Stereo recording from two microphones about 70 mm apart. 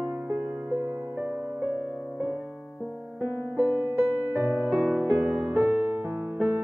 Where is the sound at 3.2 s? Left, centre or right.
Right.